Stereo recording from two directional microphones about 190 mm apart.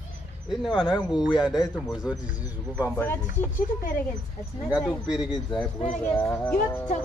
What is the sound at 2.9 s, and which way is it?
Speech, 10° left (ahead or behind).